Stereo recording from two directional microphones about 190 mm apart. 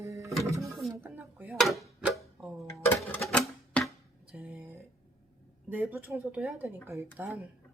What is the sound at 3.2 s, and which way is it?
Music, 5° left (ahead or behind).